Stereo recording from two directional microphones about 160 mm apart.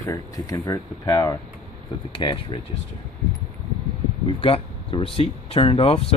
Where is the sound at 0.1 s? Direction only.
20° left (ahead or behind).